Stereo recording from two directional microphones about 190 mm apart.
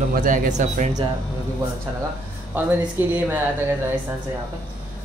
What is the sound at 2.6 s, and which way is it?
Speech, 10° right (ahead or behind).